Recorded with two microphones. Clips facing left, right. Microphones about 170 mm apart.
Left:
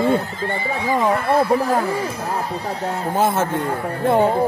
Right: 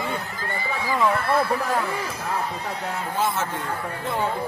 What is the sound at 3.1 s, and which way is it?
Speech, 50° left (ahead or behind).